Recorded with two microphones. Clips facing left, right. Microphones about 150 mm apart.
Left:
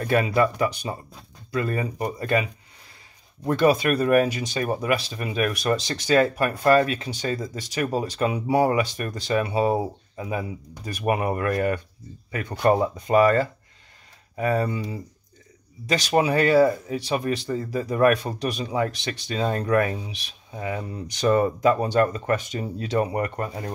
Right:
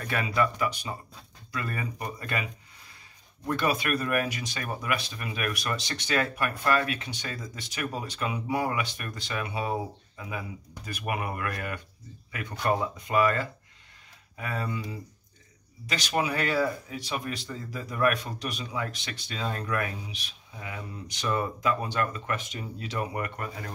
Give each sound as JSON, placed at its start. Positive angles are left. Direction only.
{"t": 0.0, "sound": "speech", "side_deg": 35}
{"t": 3.6, "sound": "speech", "side_deg": 30}
{"t": 15.9, "sound": "speech", "side_deg": 30}